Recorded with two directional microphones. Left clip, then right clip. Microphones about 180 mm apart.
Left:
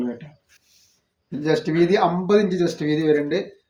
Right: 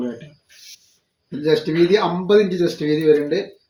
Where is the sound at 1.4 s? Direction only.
15° left (ahead or behind).